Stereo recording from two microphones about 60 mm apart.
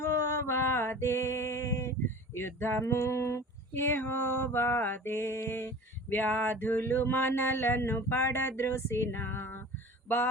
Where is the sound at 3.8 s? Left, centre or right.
Left.